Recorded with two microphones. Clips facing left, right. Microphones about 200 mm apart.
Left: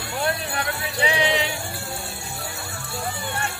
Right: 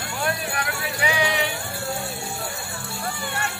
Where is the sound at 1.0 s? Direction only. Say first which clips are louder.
Left 2 dB; 20° left (ahead or behind).